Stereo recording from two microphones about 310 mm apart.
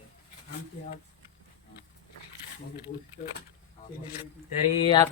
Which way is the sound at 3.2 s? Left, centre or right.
Left.